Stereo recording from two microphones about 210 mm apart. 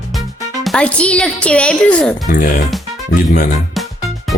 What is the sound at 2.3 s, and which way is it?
Speech, 40° left (ahead or behind).